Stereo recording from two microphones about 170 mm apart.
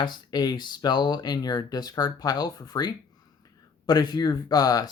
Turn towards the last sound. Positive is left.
turn(degrees=20)  # may be behind; listen again after turning